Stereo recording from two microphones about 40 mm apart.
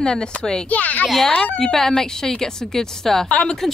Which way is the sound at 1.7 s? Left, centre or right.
Centre.